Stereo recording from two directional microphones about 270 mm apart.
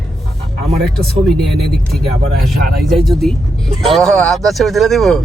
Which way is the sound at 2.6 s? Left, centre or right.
Right.